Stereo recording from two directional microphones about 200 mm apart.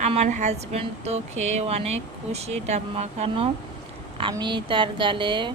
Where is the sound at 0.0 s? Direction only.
35° right (ahead or behind).